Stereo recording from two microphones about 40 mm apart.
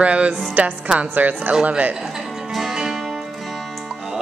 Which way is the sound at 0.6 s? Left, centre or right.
Right.